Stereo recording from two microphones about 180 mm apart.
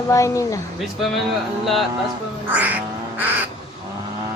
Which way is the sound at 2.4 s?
10° right (ahead or behind).